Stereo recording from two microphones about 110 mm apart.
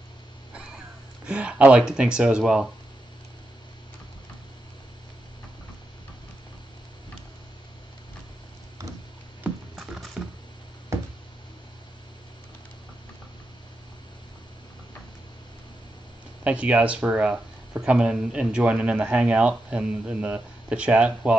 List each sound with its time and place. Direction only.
1.2 s speech: 10° right (ahead or behind)
9.5 s patter: 15° right (ahead or behind)
9.8 s patter: centre (ahead or behind)
10.9 s a sound: 25° right (ahead or behind)
16.4 s speech: 10° right (ahead or behind)